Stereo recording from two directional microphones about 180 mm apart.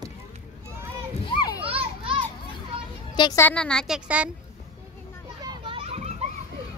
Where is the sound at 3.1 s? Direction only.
25° left (ahead or behind).